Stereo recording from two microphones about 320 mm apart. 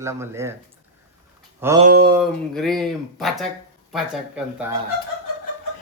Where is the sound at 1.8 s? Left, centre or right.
Right.